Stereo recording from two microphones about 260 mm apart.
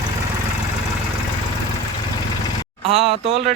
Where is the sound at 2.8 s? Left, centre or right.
Right.